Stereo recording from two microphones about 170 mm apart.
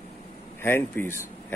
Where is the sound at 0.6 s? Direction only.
15° left (ahead or behind).